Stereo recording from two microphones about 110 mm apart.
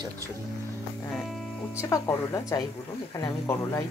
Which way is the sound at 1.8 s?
30° left (ahead or behind).